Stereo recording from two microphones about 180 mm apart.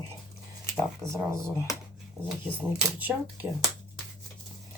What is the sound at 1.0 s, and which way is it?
Speech, 15° right (ahead or behind).